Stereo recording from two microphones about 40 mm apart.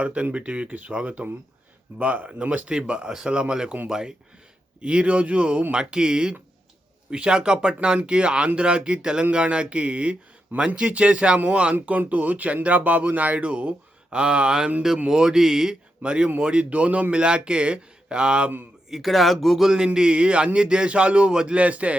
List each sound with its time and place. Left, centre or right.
0.0 s a man's voice: right; by 15.7 s centre
16.0 s a man's voice: right
17.2 s a man's voice: right
18.9 s speech: centre
19.7 s a man's voice: centre; by 21.9 s right